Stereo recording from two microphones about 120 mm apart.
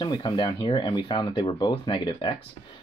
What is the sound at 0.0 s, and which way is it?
Speech, 40° left (ahead or behind).